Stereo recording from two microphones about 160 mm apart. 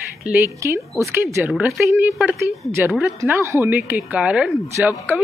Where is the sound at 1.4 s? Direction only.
5° right (ahead or behind).